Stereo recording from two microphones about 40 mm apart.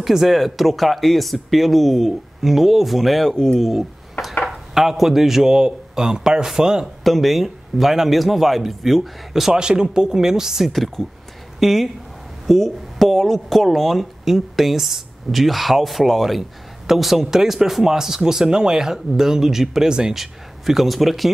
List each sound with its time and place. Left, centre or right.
0.0 s a man's voice: centre
7.0 s speech: centre
9.5 s a man's voice: centre
10.7 s a man's voice: centre
19.9 s speech: right
20.2 s speech: centre